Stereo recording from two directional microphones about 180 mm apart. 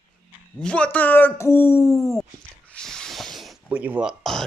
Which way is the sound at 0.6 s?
5° left (ahead or behind).